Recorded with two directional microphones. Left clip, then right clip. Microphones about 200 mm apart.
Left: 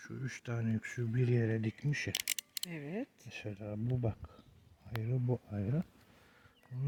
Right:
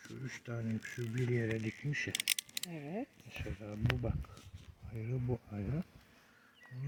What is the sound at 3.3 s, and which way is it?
Speech, 70° left (ahead or behind).